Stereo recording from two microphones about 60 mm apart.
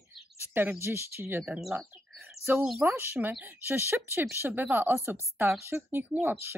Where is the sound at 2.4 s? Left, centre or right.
Left.